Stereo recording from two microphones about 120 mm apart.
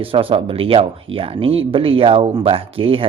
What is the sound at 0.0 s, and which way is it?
Speech, 50° right (ahead or behind).